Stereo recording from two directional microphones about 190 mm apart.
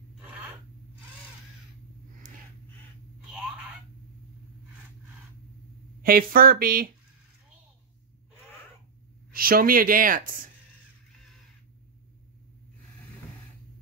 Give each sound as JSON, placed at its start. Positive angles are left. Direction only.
{"t": 6.0, "sound": "speech", "side_deg": -50}
{"t": 9.3, "sound": "speech", "side_deg": -50}